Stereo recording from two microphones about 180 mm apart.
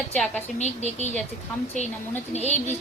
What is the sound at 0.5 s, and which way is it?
Speech, 40° left (ahead or behind).